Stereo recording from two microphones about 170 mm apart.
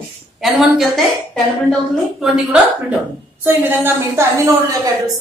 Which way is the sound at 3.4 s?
10° right (ahead or behind).